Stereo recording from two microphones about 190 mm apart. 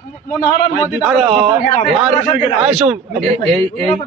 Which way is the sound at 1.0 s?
Centre (ahead or behind).